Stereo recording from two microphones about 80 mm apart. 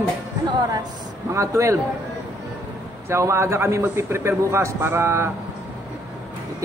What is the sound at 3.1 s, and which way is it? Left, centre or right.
Speech, right.